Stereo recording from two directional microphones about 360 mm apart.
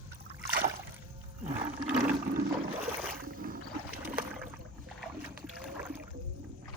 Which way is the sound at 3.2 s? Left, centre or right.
Right.